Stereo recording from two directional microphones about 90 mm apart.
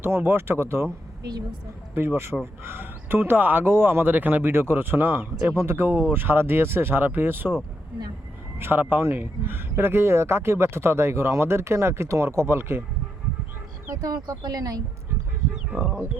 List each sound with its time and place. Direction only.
0.0 s speech: 25° right (ahead or behind)
2.0 s speech: 25° right (ahead or behind)
8.5 s speech: 25° right (ahead or behind)
13.8 s speech: 40° right (ahead or behind)